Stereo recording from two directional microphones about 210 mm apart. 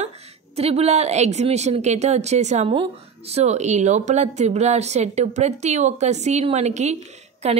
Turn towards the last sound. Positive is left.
turn(degrees=-30)  # may be behind; listen again after turning